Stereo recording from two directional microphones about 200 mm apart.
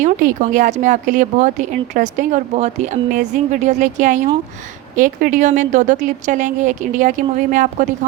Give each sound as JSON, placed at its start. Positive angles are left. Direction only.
{"t": 0.0, "sound": "speech", "side_deg": -40}